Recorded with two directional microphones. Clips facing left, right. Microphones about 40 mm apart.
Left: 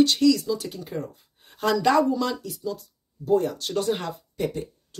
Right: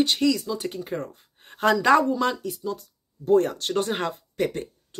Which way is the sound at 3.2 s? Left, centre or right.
Right.